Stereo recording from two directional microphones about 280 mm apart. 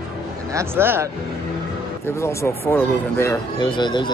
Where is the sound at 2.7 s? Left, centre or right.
Centre.